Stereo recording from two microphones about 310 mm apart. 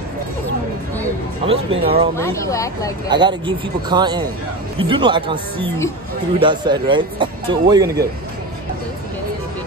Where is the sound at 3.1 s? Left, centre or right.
Centre.